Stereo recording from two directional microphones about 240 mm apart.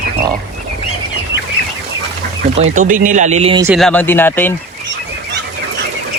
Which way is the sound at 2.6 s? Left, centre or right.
Right.